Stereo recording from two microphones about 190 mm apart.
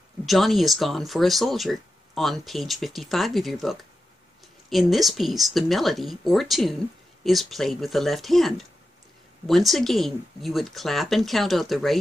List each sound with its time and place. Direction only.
0.2 s speech: centre (ahead or behind)